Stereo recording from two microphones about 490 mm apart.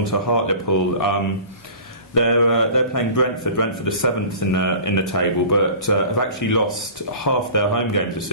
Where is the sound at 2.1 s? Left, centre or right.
Left.